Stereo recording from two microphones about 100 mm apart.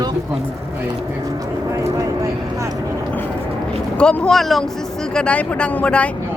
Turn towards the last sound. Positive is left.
turn(degrees=10)  # may be behind; listen again after turning